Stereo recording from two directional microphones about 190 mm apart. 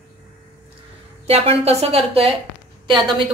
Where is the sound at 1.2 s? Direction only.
30° right (ahead or behind).